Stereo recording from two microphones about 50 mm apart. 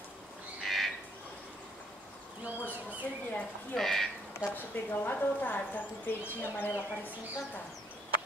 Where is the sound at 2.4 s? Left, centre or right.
Right.